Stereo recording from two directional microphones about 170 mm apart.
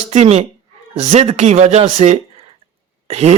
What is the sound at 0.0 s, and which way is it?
Speech, 40° right (ahead or behind).